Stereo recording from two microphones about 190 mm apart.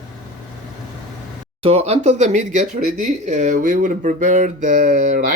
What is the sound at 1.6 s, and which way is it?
Speech, 30° right (ahead or behind).